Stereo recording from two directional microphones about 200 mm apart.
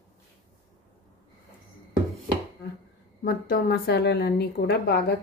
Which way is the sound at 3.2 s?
45° left (ahead or behind).